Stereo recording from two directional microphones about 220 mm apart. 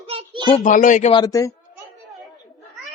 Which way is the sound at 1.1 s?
15° left (ahead or behind).